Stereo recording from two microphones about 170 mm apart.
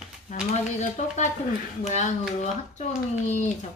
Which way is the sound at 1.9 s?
40° left (ahead or behind).